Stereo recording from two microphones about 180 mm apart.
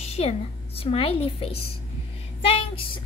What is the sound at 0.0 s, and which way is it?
A woman's voice, 35° left (ahead or behind).